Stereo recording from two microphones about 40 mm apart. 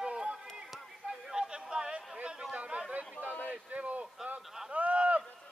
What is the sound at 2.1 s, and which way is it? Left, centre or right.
Chatter, right.